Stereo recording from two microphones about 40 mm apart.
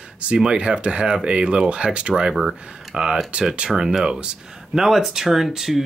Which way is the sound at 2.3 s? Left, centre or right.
Centre.